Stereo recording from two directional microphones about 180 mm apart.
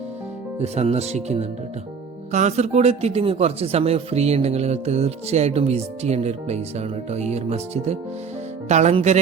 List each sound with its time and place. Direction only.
0.6 s speech: 35° right (ahead or behind)